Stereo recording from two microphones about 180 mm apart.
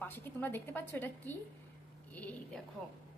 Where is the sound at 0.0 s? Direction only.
10° left (ahead or behind).